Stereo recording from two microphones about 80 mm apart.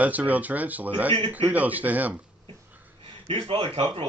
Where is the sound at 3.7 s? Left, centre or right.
Right.